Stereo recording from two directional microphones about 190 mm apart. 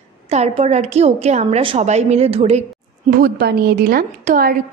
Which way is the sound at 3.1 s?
55° right (ahead or behind).